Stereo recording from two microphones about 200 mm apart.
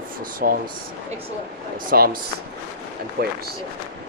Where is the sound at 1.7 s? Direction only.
45° right (ahead or behind).